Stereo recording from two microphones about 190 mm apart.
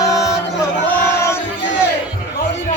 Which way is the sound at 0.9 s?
15° left (ahead or behind).